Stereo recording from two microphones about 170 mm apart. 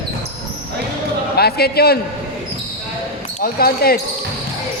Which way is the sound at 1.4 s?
70° left (ahead or behind).